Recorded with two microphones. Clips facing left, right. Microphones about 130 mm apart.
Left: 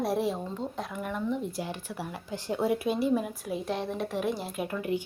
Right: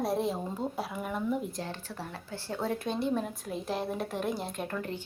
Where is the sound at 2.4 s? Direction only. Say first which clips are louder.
Left 5 dB; 15° left (ahead or behind).